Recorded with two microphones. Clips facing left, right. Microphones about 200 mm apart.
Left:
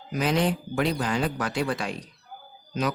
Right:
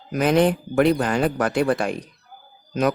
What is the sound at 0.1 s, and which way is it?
Speech, 55° right (ahead or behind).